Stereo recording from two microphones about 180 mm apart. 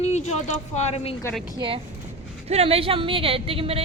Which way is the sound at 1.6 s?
30° right (ahead or behind).